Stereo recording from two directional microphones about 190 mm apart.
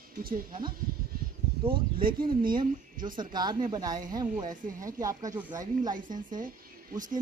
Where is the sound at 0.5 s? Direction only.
25° right (ahead or behind).